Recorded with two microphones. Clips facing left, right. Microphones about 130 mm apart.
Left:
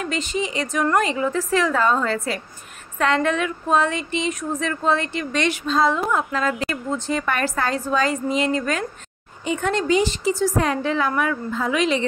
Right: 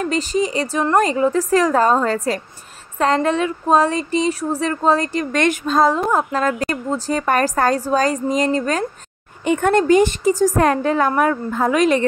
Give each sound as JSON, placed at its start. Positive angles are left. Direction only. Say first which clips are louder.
{"t": 0.0, "sound": "speech", "louder": "right 6 dB", "side_deg": -40}
{"t": 9.4, "sound": "a woman's voice", "louder": "right 7 dB", "side_deg": -55}